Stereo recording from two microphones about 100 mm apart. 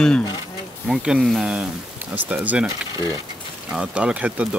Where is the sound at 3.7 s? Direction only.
10° right (ahead or behind).